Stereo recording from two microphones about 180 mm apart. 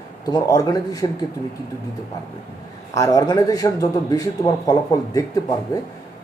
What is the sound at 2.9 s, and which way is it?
Speech, 20° left (ahead or behind).